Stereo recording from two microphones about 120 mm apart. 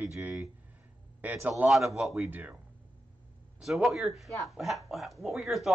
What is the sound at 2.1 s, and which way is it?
Speech, 15° right (ahead or behind).